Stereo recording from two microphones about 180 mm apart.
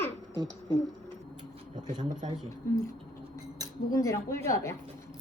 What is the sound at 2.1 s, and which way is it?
Speech, 45° right (ahead or behind).